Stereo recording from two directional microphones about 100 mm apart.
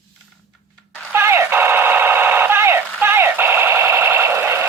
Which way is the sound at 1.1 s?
25° right (ahead or behind).